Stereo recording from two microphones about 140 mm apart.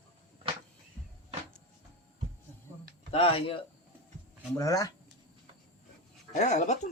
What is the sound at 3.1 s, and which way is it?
Speech, 40° left (ahead or behind).